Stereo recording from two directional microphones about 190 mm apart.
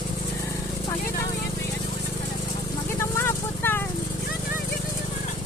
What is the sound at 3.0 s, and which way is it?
Vehicle, 10° left (ahead or behind).